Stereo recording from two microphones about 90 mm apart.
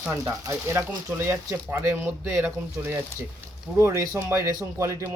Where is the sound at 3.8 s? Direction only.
35° right (ahead or behind).